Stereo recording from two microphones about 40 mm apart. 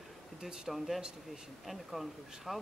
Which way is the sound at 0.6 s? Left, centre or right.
Centre.